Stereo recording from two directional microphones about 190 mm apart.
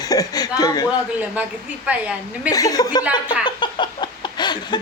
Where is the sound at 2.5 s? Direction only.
20° left (ahead or behind).